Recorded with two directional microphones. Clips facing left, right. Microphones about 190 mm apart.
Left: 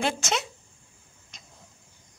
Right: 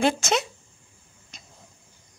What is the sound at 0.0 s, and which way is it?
Speech, 40° right (ahead or behind).